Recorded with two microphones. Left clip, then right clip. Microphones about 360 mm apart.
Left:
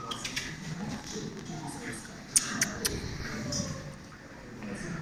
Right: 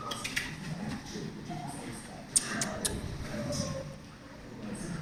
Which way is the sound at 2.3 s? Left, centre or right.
Centre.